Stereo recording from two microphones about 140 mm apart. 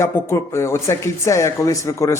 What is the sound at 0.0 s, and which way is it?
Speech, 20° left (ahead or behind).